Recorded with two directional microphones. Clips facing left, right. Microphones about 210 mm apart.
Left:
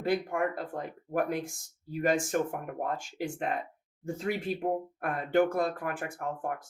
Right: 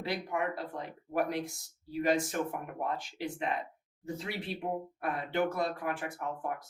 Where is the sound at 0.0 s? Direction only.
50° left (ahead or behind).